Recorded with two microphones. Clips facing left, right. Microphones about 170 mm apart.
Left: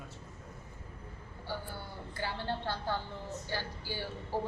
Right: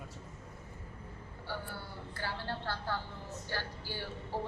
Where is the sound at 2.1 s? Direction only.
15° left (ahead or behind).